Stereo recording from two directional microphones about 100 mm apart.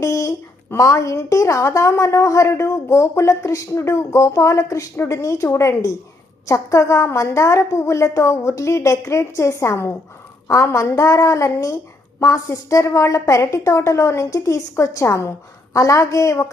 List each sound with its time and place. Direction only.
0.0 s a woman's voice: 30° left (ahead or behind)